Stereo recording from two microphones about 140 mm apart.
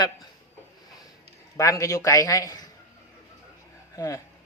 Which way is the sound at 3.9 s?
25° left (ahead or behind).